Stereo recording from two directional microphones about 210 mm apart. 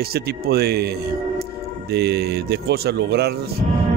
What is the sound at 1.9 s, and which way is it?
A man's voice, 50° right (ahead or behind).